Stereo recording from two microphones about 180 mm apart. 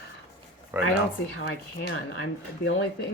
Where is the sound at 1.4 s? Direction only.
60° left (ahead or behind).